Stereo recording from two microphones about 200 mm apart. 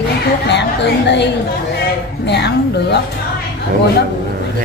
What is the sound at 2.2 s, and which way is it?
Speech, 60° left (ahead or behind).